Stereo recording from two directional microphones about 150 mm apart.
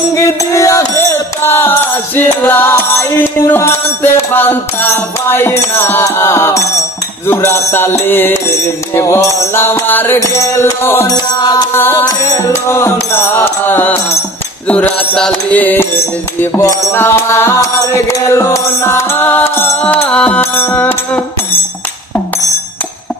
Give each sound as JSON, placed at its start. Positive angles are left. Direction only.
{"t": 0.1, "sound": "music", "side_deg": 20}